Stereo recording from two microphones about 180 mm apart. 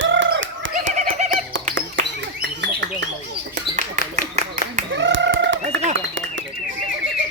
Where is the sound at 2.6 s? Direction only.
75° right (ahead or behind).